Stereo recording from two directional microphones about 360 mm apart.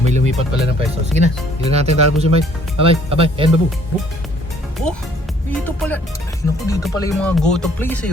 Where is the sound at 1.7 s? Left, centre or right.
Centre.